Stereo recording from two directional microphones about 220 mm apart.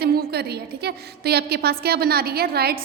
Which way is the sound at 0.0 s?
45° right (ahead or behind).